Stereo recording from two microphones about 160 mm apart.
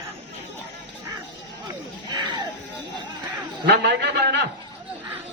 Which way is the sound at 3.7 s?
90° right.